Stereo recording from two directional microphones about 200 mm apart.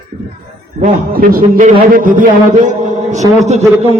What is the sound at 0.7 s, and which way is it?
A man's voice, 45° right (ahead or behind).